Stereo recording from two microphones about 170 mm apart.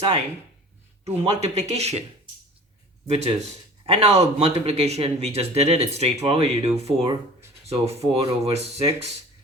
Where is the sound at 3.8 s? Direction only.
40° right (ahead or behind).